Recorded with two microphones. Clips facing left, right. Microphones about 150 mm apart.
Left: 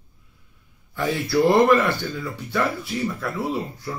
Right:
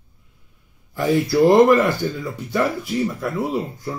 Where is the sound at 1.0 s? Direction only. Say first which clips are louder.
Right 4 dB; 20° right (ahead or behind).